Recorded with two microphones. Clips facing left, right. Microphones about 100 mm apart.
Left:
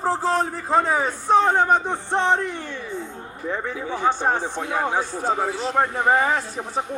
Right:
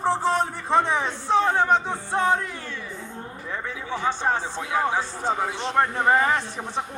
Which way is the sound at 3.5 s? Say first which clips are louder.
Left 3 dB; 45° left (ahead or behind).